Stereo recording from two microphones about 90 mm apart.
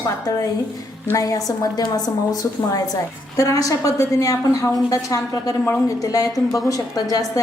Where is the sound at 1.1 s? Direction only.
40° left (ahead or behind).